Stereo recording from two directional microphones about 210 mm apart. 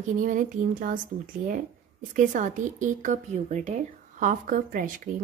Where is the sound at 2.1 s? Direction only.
40° right (ahead or behind).